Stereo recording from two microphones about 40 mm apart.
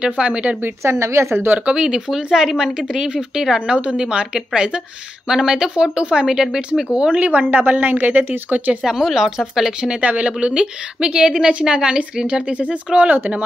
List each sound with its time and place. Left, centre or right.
0.0 s speech: right
0.8 s speech: right
1.7 s speech: centre
7.2 s speech: right
8.8 s speech: centre
9.9 s speech: right